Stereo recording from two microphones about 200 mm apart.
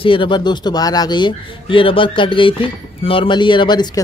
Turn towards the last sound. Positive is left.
turn(degrees=20)  # may be behind; listen again after turning